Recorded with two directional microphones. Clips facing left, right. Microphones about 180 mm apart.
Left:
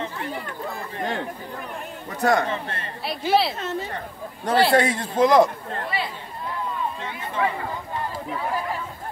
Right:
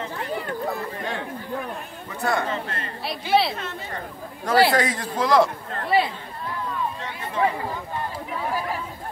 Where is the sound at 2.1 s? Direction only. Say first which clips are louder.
Left 4 dB; 40° left (ahead or behind).